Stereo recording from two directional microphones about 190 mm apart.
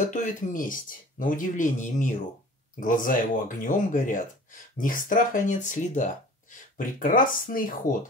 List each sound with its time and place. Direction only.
0.0 s speech: 40° left (ahead or behind)